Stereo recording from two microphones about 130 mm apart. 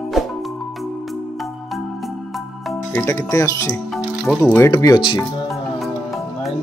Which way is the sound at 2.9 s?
20° left (ahead or behind).